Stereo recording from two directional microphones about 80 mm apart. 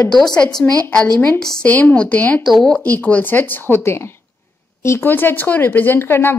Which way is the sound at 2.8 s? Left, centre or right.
Left.